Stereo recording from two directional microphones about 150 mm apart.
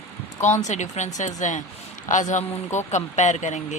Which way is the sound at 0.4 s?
50° left (ahead or behind).